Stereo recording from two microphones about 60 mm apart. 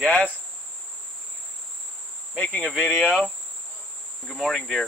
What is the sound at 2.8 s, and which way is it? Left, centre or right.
Speech, left.